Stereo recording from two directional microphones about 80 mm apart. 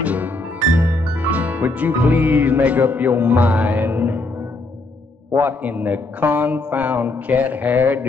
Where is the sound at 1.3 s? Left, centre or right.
Centre.